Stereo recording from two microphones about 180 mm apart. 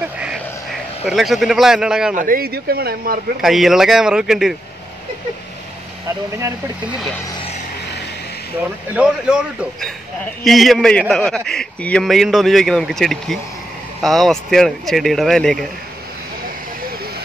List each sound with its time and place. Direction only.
1.0 s a man's voice: centre (ahead or behind)
2.1 s speech: 50° right (ahead or behind)
3.3 s a man's voice: centre (ahead or behind)
8.9 s a man's voice: 5° right (ahead or behind)